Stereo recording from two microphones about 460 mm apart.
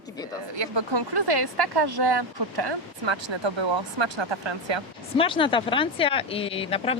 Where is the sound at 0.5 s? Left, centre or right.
Right.